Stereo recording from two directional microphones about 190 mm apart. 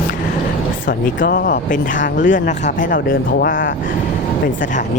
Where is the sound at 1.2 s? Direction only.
50° left (ahead or behind).